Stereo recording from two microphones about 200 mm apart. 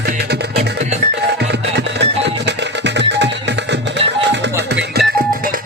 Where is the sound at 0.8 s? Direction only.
35° right (ahead or behind).